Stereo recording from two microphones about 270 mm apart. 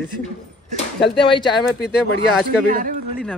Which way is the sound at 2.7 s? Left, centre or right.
Right.